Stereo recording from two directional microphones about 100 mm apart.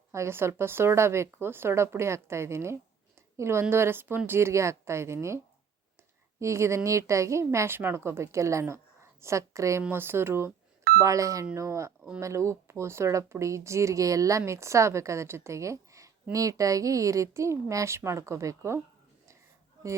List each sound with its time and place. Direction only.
0.1 s speech: 25° right (ahead or behind)
6.4 s a woman's voice: 30° right (ahead or behind)